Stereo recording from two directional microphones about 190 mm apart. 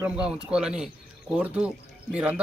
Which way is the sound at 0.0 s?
5° right (ahead or behind).